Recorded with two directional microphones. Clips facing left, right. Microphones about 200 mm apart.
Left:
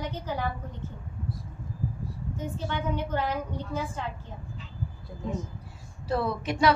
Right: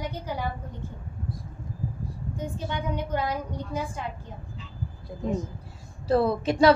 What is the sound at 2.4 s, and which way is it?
A woman's voice, 15° right (ahead or behind).